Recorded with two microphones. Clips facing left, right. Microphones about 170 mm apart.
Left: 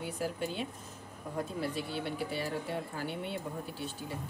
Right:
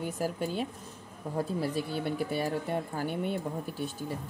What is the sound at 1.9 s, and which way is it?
Speech, 45° right (ahead or behind).